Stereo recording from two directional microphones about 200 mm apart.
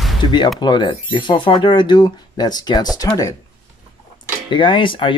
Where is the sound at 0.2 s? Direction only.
25° left (ahead or behind).